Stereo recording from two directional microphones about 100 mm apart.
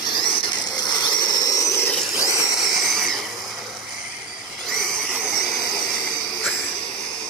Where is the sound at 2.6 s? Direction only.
Centre (ahead or behind).